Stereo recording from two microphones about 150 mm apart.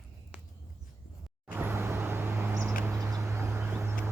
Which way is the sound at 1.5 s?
15° right (ahead or behind).